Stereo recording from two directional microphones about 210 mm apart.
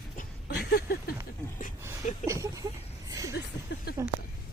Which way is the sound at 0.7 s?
50° left (ahead or behind).